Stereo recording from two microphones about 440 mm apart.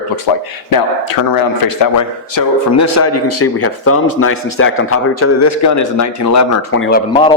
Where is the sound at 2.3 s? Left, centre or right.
Left.